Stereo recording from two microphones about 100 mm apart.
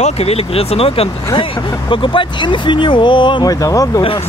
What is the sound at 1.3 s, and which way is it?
Speech, 60° left (ahead or behind).